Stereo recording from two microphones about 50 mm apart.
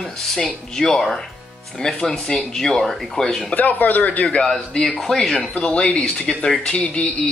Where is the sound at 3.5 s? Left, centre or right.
Left.